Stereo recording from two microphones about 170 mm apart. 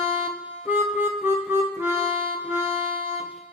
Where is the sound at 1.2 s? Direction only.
10° right (ahead or behind).